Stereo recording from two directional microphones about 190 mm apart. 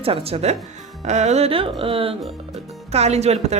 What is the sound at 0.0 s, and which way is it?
A woman's voice, 30° right (ahead or behind).